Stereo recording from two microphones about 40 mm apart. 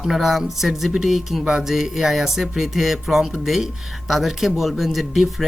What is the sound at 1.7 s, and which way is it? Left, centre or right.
Speech, centre.